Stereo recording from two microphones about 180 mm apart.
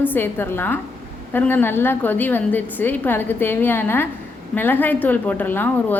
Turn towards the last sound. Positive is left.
turn(degrees=10)  # may be behind; listen again after turning